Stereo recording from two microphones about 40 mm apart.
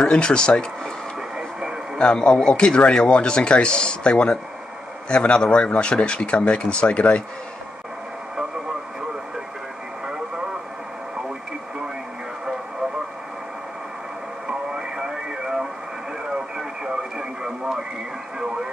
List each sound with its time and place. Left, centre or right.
0.0 s speech: left
2.0 s speech: left
14.7 s radio: centre